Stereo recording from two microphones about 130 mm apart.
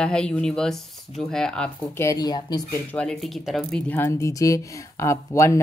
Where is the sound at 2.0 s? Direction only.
25° left (ahead or behind).